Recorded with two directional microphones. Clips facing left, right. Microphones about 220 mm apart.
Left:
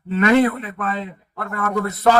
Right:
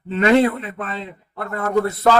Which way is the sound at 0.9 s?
45° left (ahead or behind).